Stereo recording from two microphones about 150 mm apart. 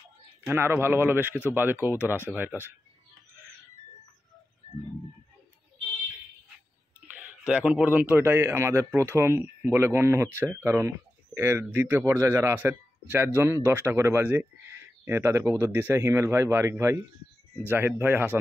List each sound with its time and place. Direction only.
0.5 s speech: 15° right (ahead or behind)
7.2 s speech: 5° right (ahead or behind)